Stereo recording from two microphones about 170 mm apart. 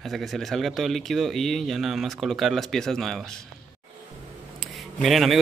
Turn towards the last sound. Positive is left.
turn(degrees=0)  # may be behind; listen again after turning